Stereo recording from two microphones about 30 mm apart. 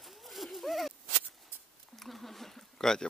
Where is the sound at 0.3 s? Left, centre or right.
Centre.